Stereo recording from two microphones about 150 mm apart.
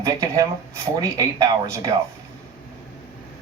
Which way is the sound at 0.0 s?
20° right (ahead or behind).